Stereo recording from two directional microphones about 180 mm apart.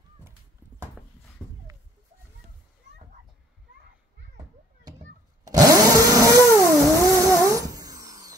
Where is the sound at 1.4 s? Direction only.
10° left (ahead or behind).